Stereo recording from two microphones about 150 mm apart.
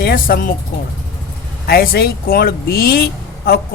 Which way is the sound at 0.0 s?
85° left.